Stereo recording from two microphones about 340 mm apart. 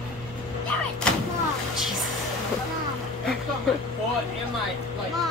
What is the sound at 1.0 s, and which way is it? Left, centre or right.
Vehicle, centre.